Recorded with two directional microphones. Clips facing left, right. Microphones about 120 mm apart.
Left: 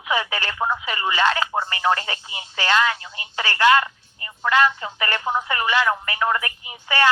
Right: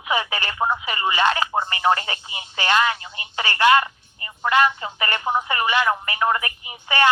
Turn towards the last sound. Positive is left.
turn(degrees=-20)  # may be behind; listen again after turning